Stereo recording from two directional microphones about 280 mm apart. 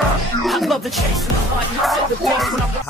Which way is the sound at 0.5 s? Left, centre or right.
Centre.